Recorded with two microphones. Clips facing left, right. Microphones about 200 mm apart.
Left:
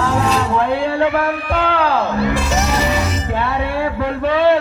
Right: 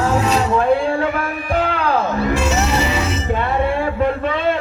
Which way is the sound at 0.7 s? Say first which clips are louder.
Left 2 dB; 65° left (ahead or behind).